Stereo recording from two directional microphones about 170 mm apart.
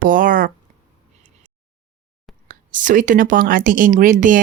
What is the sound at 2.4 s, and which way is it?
Speech, 50° right (ahead or behind).